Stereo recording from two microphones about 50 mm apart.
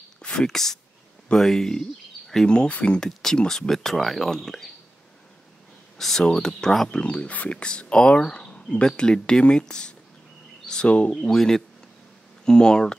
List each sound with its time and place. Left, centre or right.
0.2 s speech: centre
2.5 s speech: left
3.1 s speech: centre
5.9 s speech: centre
6.9 s speech: left